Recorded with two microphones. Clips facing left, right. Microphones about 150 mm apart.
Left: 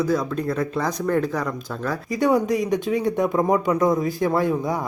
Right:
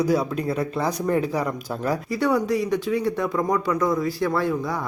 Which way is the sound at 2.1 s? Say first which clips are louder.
Left 3 dB; 20° left (ahead or behind).